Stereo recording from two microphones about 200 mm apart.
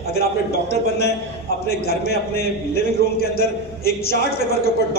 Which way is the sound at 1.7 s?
50° left (ahead or behind).